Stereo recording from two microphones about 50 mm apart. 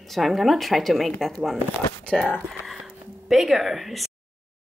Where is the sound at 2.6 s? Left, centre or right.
Centre.